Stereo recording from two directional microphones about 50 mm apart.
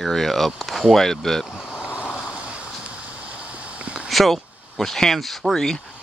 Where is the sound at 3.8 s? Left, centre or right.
Right.